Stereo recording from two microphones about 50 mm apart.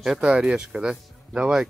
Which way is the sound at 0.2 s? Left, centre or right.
Centre.